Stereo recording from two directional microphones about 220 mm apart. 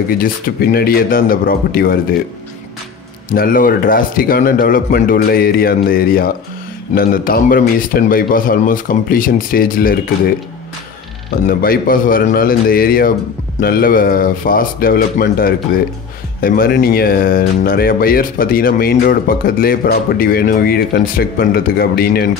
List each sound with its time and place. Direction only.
0.1 s a man's voice: 40° left (ahead or behind)
3.3 s a man's voice: 40° left (ahead or behind)
11.4 s a man's voice: 40° left (ahead or behind)